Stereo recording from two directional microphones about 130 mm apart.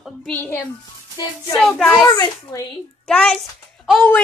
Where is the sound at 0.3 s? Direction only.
15° left (ahead or behind).